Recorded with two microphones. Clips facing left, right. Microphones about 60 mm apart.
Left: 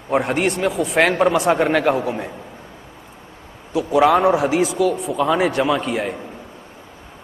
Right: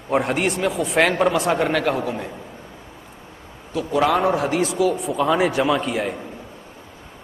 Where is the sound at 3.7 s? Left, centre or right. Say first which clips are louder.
Left 4 dB; centre.